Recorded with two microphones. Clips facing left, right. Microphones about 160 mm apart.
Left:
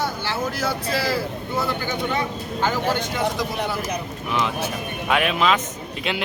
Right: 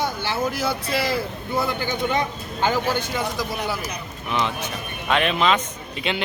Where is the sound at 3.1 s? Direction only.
Centre (ahead or behind).